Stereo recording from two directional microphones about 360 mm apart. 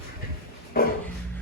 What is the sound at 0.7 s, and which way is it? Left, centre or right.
Speech, left.